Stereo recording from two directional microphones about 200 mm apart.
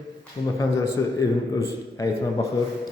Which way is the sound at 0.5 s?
15° left (ahead or behind).